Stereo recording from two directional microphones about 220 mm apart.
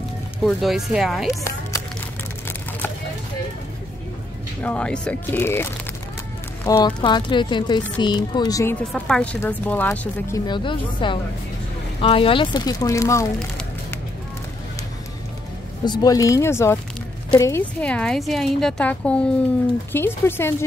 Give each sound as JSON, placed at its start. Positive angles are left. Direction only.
{"t": 0.4, "sound": "a woman's voice", "side_deg": 0}
{"t": 4.6, "sound": "a woman's voice", "side_deg": 5}
{"t": 15.8, "sound": "a woman's voice", "side_deg": 20}